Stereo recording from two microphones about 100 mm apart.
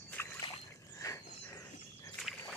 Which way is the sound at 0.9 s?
30° left (ahead or behind).